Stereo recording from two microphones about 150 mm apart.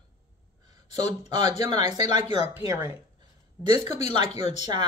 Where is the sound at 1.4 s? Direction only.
45° left (ahead or behind).